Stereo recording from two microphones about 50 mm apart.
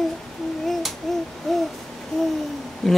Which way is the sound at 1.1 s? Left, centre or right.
Centre.